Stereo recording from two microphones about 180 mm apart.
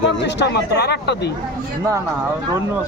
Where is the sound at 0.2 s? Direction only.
75° left (ahead or behind).